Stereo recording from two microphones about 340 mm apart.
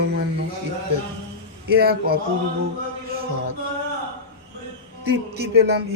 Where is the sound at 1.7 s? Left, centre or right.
Right.